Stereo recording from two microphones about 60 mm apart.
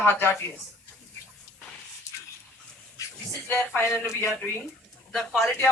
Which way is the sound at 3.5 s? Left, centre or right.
Left.